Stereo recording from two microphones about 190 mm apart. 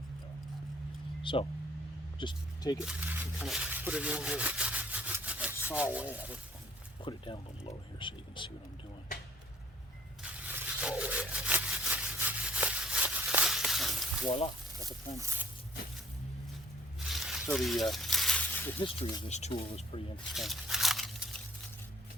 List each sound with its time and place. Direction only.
1.2 s speech: 25° left (ahead or behind)
2.8 s speech: 5° right (ahead or behind)
7.0 s speech: 25° left (ahead or behind)
10.2 s sawing: 5° right (ahead or behind)
14.3 s speech: 30° left (ahead or behind)
17.0 s snake: centre (ahead or behind)
17.5 s a sound: centre (ahead or behind)
18.8 s speech: 30° left (ahead or behind)
20.3 s a sound: centre (ahead or behind)